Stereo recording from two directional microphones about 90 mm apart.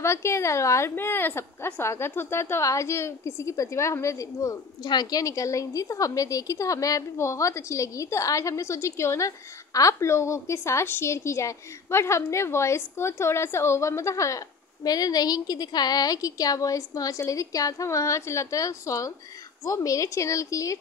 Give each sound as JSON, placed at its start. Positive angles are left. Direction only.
{"t": 0.0, "sound": "a woman's voice", "side_deg": 30}
{"t": 4.8, "sound": "a woman's voice", "side_deg": 50}
{"t": 5.2, "sound": "a woman's voice", "side_deg": 35}